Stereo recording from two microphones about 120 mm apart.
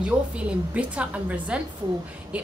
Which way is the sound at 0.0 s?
10° right (ahead or behind).